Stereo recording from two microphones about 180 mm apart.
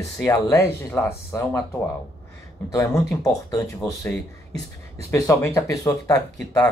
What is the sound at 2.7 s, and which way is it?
Speech, 15° left (ahead or behind).